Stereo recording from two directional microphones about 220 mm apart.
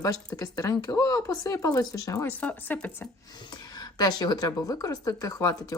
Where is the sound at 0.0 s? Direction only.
15° left (ahead or behind).